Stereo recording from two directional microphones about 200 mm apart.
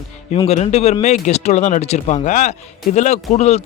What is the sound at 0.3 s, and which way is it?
A man's voice, 30° left (ahead or behind).